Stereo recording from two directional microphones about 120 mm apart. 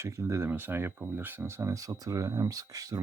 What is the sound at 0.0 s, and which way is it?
Speech, 20° right (ahead or behind).